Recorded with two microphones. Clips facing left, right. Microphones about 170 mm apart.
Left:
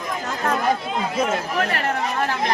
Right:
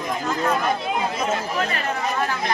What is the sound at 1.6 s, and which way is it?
Speech, 65° left (ahead or behind).